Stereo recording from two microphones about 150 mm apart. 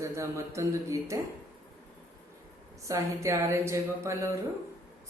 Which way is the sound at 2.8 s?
20° right (ahead or behind).